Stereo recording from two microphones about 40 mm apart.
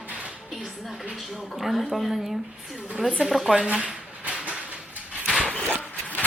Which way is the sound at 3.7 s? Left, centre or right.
Right.